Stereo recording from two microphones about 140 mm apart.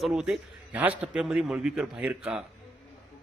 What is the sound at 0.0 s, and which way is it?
A man's voice, 5° right (ahead or behind).